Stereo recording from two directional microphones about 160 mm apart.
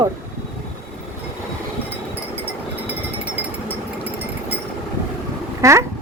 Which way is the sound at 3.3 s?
10° right (ahead or behind).